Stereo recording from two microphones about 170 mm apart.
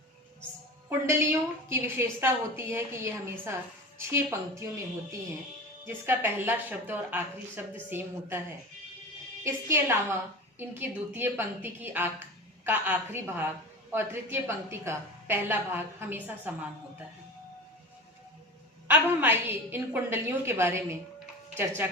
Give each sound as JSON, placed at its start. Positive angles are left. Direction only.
{"t": 0.9, "sound": "a woman's voice", "side_deg": -15}
{"t": 5.8, "sound": "a woman's voice", "side_deg": -15}
{"t": 9.4, "sound": "a woman's voice", "side_deg": -15}
{"t": 18.9, "sound": "a woman's voice", "side_deg": -10}